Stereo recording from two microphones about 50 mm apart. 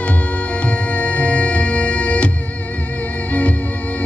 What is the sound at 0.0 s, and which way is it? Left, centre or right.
Music, left.